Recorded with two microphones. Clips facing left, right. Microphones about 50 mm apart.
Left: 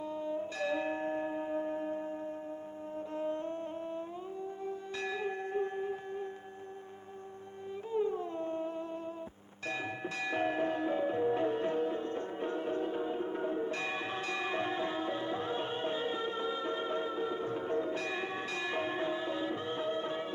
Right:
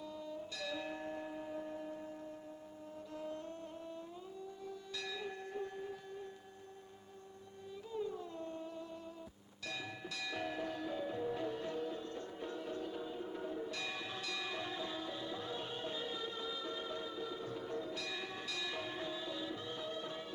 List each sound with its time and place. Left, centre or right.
0.0 s music: left
7.9 s a sound: left
9.6 s music: left